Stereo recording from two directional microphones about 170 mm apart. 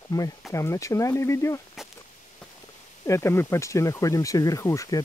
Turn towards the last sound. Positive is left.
turn(degrees=20)  # may be behind; listen again after turning